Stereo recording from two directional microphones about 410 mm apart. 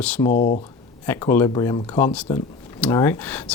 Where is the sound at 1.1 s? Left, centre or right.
Centre.